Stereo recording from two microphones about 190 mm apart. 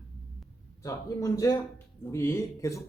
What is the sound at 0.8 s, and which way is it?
A man's voice, 20° left (ahead or behind).